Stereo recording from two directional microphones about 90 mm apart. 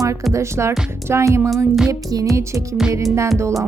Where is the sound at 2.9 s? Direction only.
35° right (ahead or behind).